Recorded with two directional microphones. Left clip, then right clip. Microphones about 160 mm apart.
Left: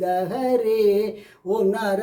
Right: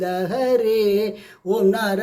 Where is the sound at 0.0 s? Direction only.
Centre (ahead or behind).